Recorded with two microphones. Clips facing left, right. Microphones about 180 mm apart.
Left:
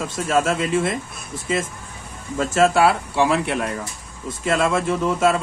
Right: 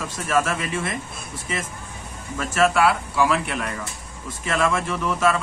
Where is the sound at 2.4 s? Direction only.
25° left (ahead or behind).